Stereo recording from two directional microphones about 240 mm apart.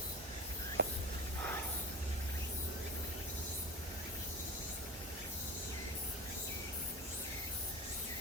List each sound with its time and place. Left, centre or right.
0.8 s whispering: right